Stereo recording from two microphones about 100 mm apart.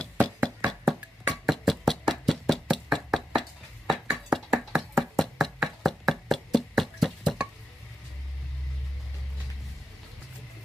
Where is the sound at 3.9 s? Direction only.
5° right (ahead or behind).